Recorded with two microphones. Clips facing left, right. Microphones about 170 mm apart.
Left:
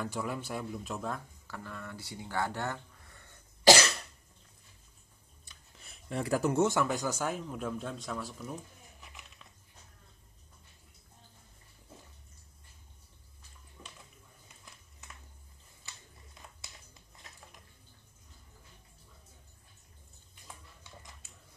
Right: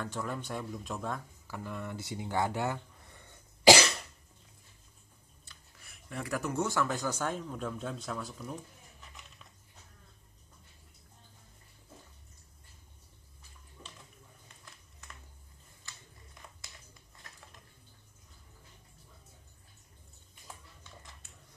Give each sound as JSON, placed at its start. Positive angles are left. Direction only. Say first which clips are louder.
{"t": 0.0, "sound": "speech", "louder": "left 1 dB", "side_deg": 10}
{"t": 1.5, "sound": "speech", "louder": "right 4 dB", "side_deg": -15}
{"t": 5.4, "sound": "speech", "louder": "left 2 dB", "side_deg": 20}